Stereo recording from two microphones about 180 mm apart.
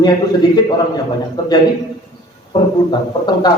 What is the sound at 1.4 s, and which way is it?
A man's voice, 20° left (ahead or behind).